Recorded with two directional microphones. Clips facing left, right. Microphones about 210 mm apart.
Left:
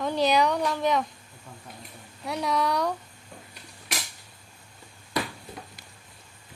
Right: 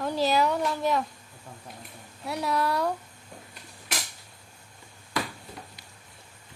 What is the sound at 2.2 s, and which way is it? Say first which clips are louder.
Speech: left 1 dB; 5° right (ahead or behind).